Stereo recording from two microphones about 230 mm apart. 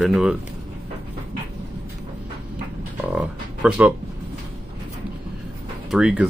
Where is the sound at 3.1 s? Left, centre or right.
Centre.